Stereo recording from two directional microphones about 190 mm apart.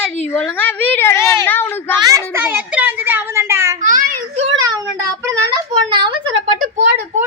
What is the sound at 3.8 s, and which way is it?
Speech, 40° right (ahead or behind).